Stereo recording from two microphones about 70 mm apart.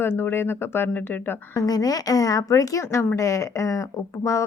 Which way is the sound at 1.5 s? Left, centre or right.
Left.